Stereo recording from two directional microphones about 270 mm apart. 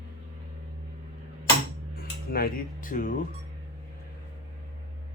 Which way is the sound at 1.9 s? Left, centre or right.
Left.